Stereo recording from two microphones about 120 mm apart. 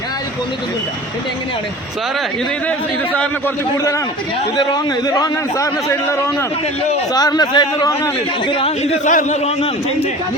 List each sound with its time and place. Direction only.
4.5 s a man's voice: 35° left (ahead or behind)
8.4 s a man's voice: 45° left (ahead or behind)
8.8 s a man's voice: 80° left; by 10.1 s 65° left (ahead or behind)